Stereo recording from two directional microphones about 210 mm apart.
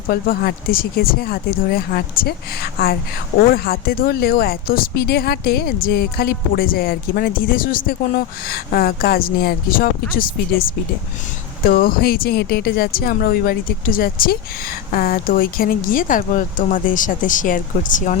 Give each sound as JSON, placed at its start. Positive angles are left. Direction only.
{"t": 0.1, "sound": "speech", "side_deg": 45}